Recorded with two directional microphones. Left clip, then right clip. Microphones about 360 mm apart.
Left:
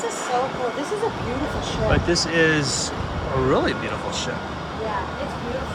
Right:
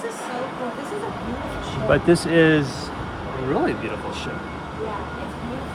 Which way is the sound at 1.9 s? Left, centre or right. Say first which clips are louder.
Right 5 dB; centre.